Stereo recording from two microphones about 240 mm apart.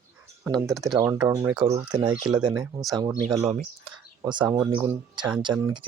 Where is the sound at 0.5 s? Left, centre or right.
Centre.